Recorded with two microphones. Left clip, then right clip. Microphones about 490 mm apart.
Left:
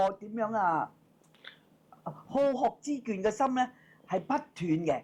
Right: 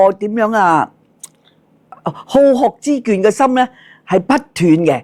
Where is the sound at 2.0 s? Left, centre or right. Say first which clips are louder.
Right 18 dB; right.